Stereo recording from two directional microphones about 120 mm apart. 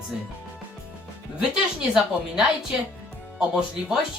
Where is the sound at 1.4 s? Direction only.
5° right (ahead or behind).